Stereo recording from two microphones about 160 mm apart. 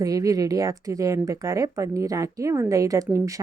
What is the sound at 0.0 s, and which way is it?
Speech, 20° right (ahead or behind).